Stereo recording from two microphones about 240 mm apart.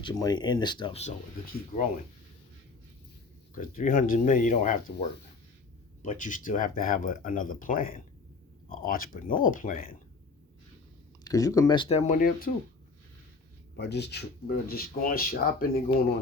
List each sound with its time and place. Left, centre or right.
0.0 s speech: centre
3.5 s speech: left
11.2 s speech: centre; by 12.5 s left
13.7 s speech: left